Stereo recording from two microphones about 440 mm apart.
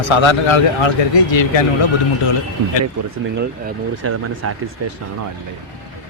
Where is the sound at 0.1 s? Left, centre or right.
Left.